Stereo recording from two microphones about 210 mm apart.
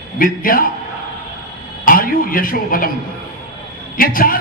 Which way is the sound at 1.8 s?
40° left (ahead or behind).